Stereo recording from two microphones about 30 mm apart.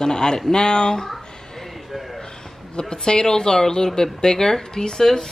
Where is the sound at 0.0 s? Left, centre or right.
Left.